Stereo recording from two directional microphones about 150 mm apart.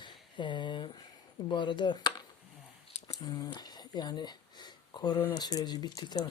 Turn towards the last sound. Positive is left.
turn(degrees=25)  # may be behind; listen again after turning